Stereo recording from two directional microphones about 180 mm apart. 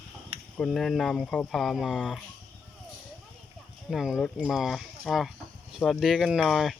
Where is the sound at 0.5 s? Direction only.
Centre (ahead or behind).